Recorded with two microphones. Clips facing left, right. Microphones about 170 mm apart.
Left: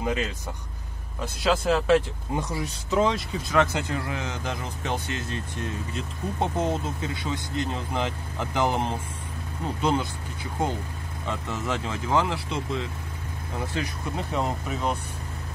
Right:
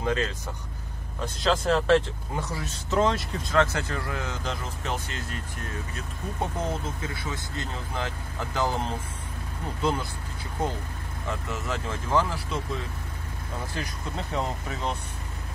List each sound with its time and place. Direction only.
0.0 s speech: 15° left (ahead or behind)
2.9 s speech: centre (ahead or behind)
3.5 s speech: 15° left (ahead or behind)
11.2 s speech: 20° left (ahead or behind)
14.1 s speech: 5° left (ahead or behind)